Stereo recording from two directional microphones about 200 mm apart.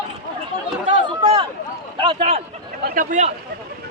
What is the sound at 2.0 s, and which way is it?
Speech, 30° right (ahead or behind).